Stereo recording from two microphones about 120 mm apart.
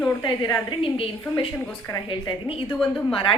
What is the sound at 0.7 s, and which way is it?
Speech, 50° left (ahead or behind).